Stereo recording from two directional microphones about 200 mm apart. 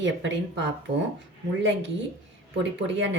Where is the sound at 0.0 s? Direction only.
65° right (ahead or behind).